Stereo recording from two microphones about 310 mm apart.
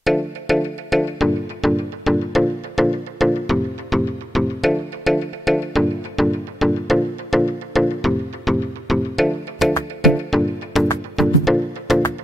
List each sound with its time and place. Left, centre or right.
0.0 s music: centre